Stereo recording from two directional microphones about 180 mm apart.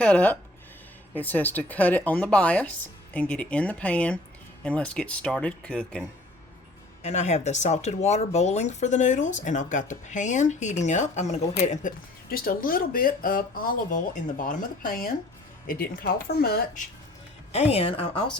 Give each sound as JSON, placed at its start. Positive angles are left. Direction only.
{"t": 0.0, "sound": "speech", "side_deg": 5}
{"t": 7.0, "sound": "speech", "side_deg": 40}
{"t": 17.5, "sound": "speech", "side_deg": 35}